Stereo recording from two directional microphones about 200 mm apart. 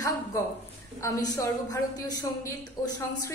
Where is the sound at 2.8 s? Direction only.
20° left (ahead or behind).